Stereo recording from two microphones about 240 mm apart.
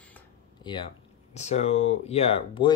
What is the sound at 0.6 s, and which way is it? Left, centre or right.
Speech, centre.